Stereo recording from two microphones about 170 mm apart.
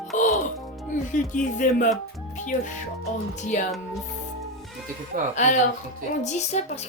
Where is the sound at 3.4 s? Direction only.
45° left (ahead or behind).